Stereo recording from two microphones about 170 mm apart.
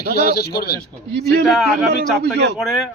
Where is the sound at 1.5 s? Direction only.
Centre (ahead or behind).